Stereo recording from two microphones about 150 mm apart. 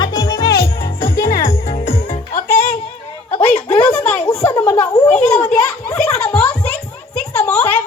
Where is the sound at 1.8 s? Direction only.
65° left (ahead or behind).